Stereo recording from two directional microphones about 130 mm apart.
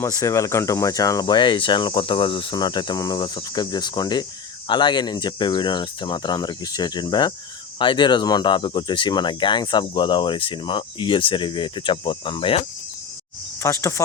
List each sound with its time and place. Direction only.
0.0 s speech: 25° left (ahead or behind); by 12.6 s 45° left (ahead or behind)
13.6 s speech: 20° left (ahead or behind)